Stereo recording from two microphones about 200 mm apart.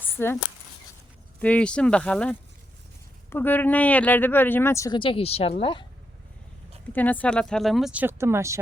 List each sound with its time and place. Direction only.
0.0 s a sound: 10° left (ahead or behind)
1.4 s speech: 5° left (ahead or behind); by 5.8 s 25° left (ahead or behind)
6.9 s speech: 10° left (ahead or behind); by 8.5 s 15° right (ahead or behind)